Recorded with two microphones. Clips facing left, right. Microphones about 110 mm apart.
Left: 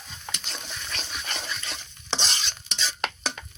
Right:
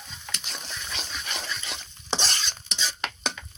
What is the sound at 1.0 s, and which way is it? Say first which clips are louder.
Dog: left 1 dB; 5° left (ahead or behind).